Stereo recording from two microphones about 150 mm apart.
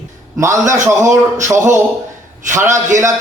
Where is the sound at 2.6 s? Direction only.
55° right (ahead or behind).